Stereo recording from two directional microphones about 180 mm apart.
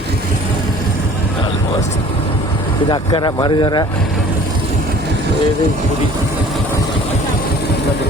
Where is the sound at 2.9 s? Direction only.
25° left (ahead or behind).